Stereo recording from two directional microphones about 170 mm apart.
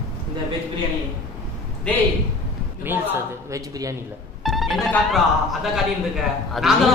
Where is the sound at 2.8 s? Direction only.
10° right (ahead or behind).